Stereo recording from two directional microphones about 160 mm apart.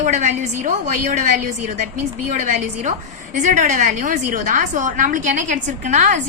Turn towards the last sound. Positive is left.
turn(degrees=-50)  # may be behind; listen again after turning